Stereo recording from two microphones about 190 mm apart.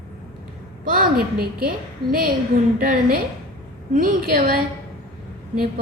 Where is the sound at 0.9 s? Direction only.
50° right (ahead or behind).